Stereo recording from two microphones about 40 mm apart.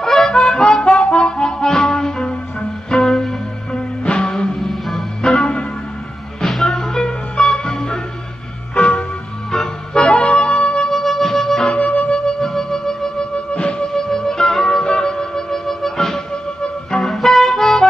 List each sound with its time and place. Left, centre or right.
0.0 s music: centre
4.0 s music: left
4.6 s music: centre
6.7 s music: centre
8.7 s music: left
9.5 s music: centre
10.0 s music: left
10.9 s music: centre
11.7 s music: left
12.3 s music: centre
13.5 s music: left
13.9 s music: centre